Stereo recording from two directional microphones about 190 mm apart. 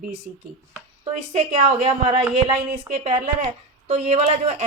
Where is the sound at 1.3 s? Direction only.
30° right (ahead or behind).